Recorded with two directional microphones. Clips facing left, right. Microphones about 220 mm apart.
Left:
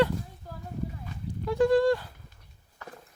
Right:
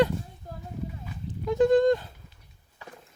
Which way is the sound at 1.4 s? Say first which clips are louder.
Right 2 dB; 20° right (ahead or behind).